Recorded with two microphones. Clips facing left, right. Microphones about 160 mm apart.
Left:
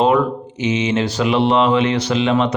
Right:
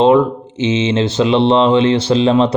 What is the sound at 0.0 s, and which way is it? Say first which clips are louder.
Speech: right 4 dB; 25° right (ahead or behind).